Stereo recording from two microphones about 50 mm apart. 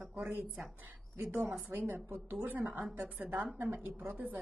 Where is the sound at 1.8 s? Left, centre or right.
Right.